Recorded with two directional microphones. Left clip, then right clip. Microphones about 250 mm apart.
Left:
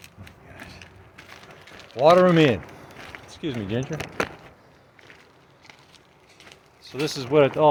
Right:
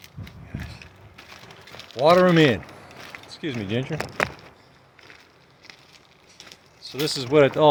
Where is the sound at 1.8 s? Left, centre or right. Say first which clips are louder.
Left 1 dB; centre.